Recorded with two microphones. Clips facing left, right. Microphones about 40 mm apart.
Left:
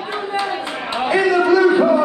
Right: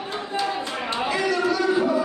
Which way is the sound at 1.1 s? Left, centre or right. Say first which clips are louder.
Left 10 dB; left.